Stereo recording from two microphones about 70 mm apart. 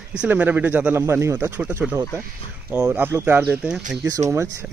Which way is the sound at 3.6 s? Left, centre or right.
Centre.